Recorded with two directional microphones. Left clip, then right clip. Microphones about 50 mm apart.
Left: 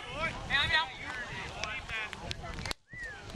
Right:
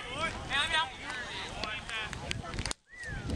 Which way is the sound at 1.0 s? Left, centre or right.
Centre.